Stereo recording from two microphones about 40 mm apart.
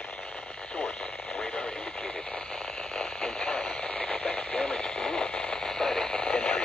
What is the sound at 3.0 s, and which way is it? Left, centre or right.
Radio, centre.